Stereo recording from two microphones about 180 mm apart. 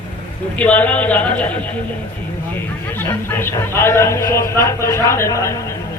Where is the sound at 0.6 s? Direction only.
10° left (ahead or behind).